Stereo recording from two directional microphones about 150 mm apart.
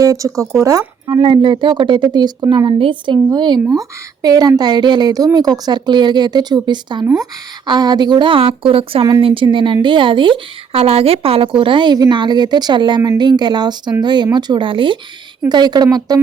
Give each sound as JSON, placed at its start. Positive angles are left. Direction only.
{"t": 0.0, "sound": "a woman's voice", "side_deg": -20}